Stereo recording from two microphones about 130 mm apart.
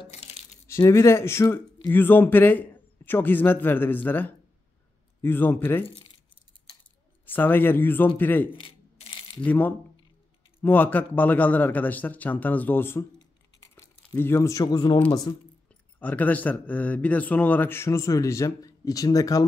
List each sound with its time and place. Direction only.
0.1 s coin: 55° left (ahead or behind)
0.7 s speech: 20° left (ahead or behind)
5.9 s keys jangling: 40° left (ahead or behind)
7.3 s speech: 15° left (ahead or behind)
8.5 s coin: 40° left (ahead or behind)
9.4 s speech: 15° left (ahead or behind)
13.6 s a sound: 20° left (ahead or behind)
15.3 s speech: 30° left (ahead or behind)
15.7 s speech: 10° left (ahead or behind)